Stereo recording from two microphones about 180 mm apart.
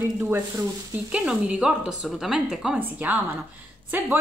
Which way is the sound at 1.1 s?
5° right (ahead or behind).